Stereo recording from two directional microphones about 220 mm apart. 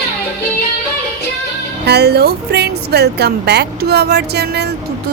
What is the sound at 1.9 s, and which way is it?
Speech, 45° right (ahead or behind).